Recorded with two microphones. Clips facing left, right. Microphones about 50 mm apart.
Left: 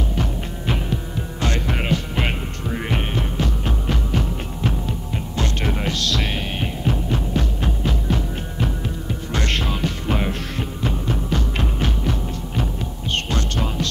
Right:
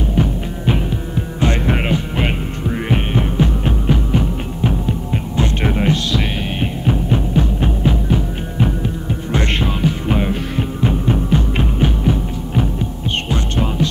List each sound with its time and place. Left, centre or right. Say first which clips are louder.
0.1 s throbbing: right 7 dB; centre
2.2 s music: right 5 dB; centre
10.9 s music: right 7 dB; right
13.3 s hum: right 4 dB; centre